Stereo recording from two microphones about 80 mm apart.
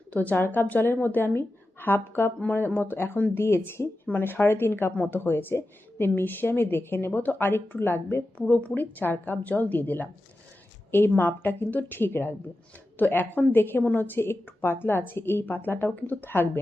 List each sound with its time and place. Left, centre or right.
0.1 s a woman's voice: left
11.2 s a woman's voice: left